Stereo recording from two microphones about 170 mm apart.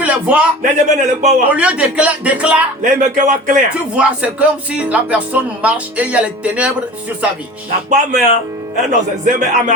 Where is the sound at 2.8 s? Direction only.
45° right (ahead or behind).